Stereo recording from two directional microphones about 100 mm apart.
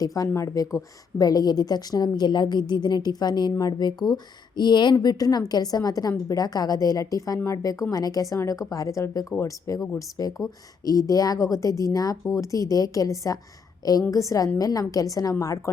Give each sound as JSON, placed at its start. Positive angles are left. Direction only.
{"t": 0.0, "sound": "a woman's voice", "side_deg": 35}